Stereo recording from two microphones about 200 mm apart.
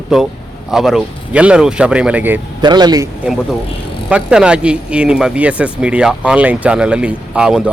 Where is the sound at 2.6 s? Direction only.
20° right (ahead or behind).